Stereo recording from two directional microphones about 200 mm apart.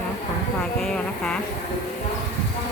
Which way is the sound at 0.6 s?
5° left (ahead or behind).